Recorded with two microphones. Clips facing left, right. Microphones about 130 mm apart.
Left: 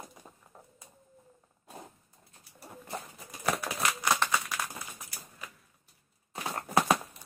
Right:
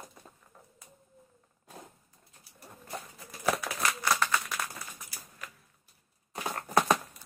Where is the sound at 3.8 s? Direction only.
20° left (ahead or behind).